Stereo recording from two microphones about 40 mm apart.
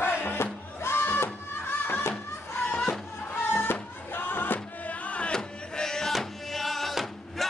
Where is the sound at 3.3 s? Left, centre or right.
Left.